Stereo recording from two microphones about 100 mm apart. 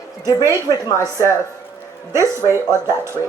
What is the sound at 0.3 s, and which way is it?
Speech, 35° left (ahead or behind).